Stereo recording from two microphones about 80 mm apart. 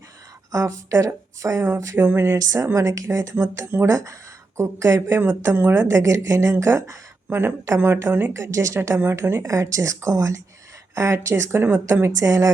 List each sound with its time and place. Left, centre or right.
0.5 s speech: right
2.4 s a woman's voice: right
5.9 s a woman's voice: right
8.3 s speech: right